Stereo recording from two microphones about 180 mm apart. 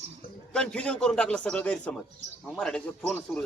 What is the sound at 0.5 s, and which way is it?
A man's voice, 5° left (ahead or behind).